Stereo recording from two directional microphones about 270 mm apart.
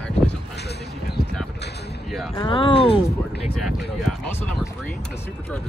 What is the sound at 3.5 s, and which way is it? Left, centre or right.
Speech, centre.